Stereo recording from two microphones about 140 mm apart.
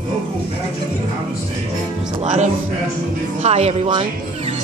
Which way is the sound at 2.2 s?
55° right (ahead or behind).